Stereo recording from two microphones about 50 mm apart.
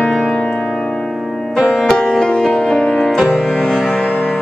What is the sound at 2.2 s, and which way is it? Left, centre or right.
Music, centre.